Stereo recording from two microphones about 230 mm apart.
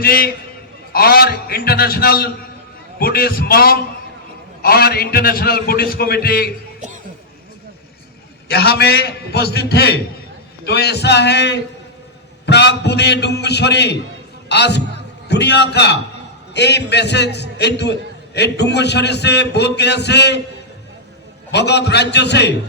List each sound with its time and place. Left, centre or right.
0.0 s a man's voice: left
8.4 s a man's voice: left
21.5 s a man's voice: left